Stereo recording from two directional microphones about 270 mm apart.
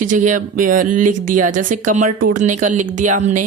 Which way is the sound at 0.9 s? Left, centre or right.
Right.